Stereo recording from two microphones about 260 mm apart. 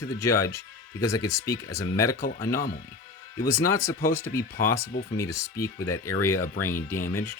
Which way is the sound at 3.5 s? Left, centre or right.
Centre.